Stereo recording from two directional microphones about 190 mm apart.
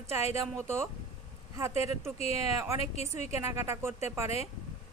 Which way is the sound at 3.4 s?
15° right (ahead or behind).